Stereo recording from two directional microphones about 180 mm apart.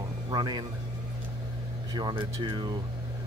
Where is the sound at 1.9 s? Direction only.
25° right (ahead or behind).